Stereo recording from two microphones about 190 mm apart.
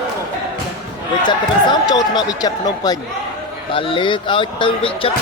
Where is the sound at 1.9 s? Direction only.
20° left (ahead or behind).